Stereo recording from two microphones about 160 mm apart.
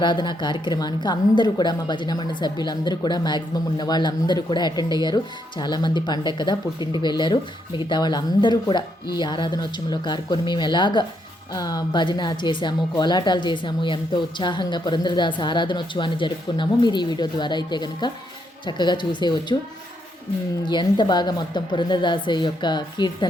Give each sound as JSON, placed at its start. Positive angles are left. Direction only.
{"t": 0.0, "sound": "a woman's voice", "side_deg": 30}
{"t": 20.7, "sound": "a woman's voice", "side_deg": 30}